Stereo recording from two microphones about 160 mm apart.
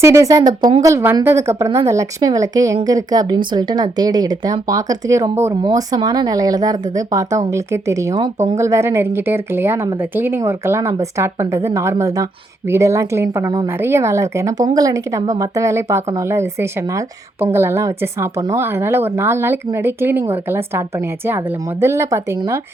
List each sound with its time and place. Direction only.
0.0 s speech: 20° right (ahead or behind)